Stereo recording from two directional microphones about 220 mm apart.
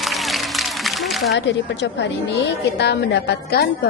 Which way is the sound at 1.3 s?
50° left (ahead or behind).